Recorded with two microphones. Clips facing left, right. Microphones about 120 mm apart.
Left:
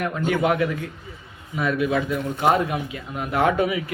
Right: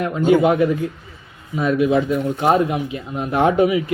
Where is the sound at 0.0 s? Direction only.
25° right (ahead or behind).